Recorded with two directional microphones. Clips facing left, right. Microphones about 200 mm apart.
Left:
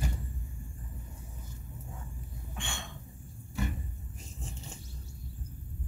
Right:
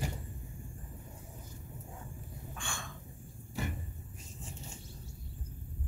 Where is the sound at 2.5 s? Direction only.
25° left (ahead or behind).